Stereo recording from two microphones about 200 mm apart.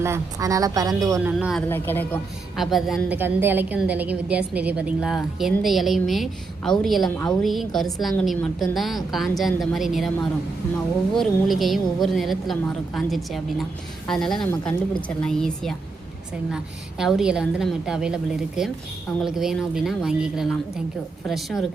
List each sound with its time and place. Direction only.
0.0 s speech: 15° right (ahead or behind)
1.6 s speech: 10° left (ahead or behind)
2.6 s a woman's voice: centre (ahead or behind)
11.1 s a woman's voice: centre (ahead or behind)
17.0 s a woman's voice: 5° right (ahead or behind)